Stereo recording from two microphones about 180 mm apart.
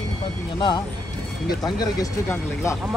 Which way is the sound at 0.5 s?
25° left (ahead or behind).